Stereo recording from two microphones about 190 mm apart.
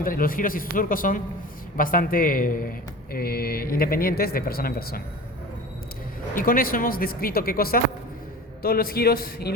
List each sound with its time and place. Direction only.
0.0 s speech: 50° left (ahead or behind)
6.3 s speech: 45° left (ahead or behind)